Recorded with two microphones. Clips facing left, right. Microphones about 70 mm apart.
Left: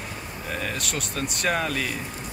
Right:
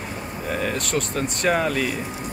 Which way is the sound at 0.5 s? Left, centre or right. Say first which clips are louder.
Right 6 dB; centre.